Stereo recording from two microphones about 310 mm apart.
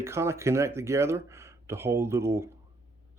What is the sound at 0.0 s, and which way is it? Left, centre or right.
Speech, centre.